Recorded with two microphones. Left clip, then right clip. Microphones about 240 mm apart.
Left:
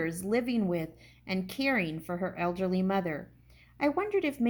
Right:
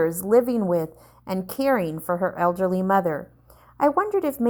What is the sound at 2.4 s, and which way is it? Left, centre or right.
A woman's voice, right.